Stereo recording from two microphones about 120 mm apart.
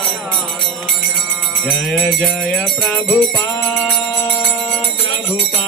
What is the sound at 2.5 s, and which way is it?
Music, centre (ahead or behind).